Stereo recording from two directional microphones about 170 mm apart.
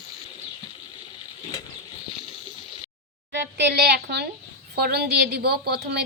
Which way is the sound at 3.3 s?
90° right.